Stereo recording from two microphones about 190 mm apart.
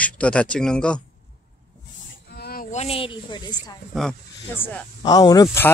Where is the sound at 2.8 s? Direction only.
30° left (ahead or behind).